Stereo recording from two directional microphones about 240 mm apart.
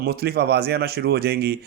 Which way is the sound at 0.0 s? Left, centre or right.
Right.